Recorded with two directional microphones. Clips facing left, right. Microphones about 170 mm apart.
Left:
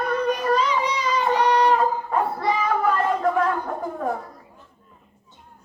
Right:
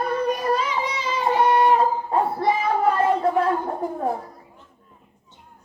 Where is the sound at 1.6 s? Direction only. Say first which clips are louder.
Right 1 dB; 30° right (ahead or behind).